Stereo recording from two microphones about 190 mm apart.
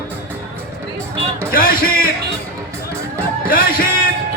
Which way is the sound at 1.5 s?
50° left (ahead or behind).